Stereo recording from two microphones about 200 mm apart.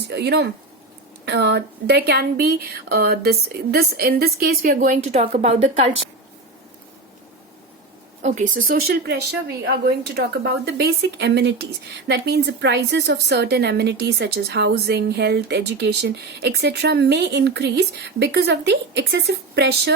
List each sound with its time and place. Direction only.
0.1 s a woman's voice: 55° right (ahead or behind); by 5.9 s 35° right (ahead or behind)
8.2 s a woman's voice: 35° right (ahead or behind); by 19.9 s 55° right (ahead or behind)